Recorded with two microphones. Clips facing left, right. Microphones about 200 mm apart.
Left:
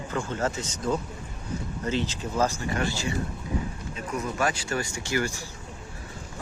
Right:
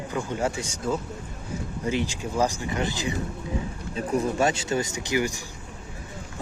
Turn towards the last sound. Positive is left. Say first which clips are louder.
# right 2 dB
turn(degrees=-15)  # may be behind; listen again after turning